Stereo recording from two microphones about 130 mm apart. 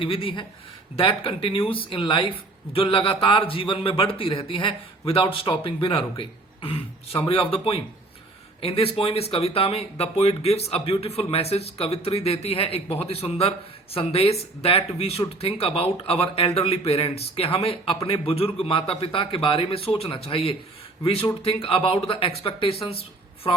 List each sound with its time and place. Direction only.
0.0 s speech: 40° left (ahead or behind)